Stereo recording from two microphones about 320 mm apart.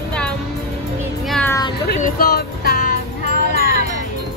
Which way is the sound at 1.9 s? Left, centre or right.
Left.